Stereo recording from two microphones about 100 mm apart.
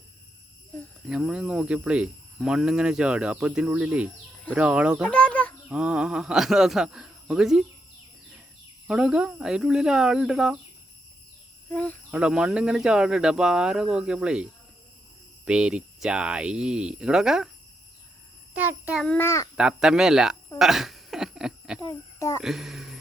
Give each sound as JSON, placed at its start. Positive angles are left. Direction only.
{"t": 1.0, "sound": "speech", "side_deg": -10}
{"t": 5.0, "sound": "bird", "side_deg": 10}
{"t": 5.6, "sound": "speech", "side_deg": -10}
{"t": 8.9, "sound": "speech", "side_deg": -10}
{"t": 11.7, "sound": "speech", "side_deg": 15}
{"t": 12.1, "sound": "speech", "side_deg": -10}
{"t": 19.2, "sound": "speech", "side_deg": 30}
{"t": 19.5, "sound": "speech", "side_deg": -5}
{"t": 20.6, "sound": "a sound", "side_deg": -5}
{"t": 22.4, "sound": "speech", "side_deg": 0}